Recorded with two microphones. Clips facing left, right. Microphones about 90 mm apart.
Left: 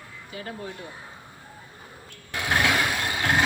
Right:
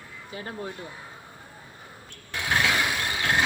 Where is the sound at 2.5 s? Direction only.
10° left (ahead or behind).